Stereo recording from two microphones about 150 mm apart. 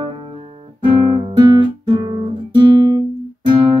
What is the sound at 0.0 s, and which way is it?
Music, 35° right (ahead or behind).